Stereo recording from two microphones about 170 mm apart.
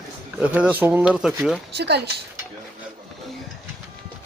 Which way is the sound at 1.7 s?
75° right (ahead or behind).